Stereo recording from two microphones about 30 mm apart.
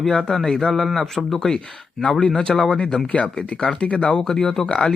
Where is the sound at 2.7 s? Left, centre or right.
Left.